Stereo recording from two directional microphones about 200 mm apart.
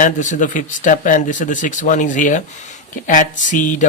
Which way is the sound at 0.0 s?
40° left (ahead or behind).